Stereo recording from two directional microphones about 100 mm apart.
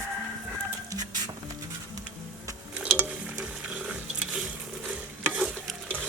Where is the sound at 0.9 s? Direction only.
40° right (ahead or behind).